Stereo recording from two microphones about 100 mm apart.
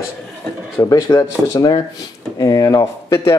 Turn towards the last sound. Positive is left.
turn(degrees=30)  # may be behind; listen again after turning